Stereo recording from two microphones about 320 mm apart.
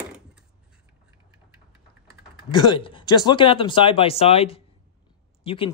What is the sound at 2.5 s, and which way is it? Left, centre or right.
Speech, centre.